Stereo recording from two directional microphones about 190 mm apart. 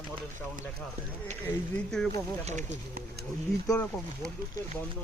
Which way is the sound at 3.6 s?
5° left (ahead or behind).